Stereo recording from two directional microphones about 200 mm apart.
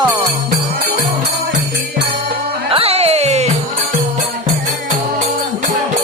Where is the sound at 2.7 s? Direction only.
30° right (ahead or behind).